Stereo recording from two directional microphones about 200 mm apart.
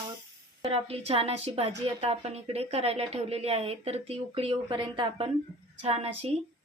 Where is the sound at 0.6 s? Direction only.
30° right (ahead or behind).